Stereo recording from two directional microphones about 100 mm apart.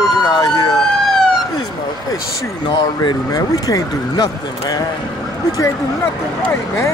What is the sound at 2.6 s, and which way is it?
Speech, 45° left (ahead or behind).